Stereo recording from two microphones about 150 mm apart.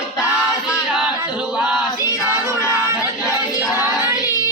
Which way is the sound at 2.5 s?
20° left (ahead or behind).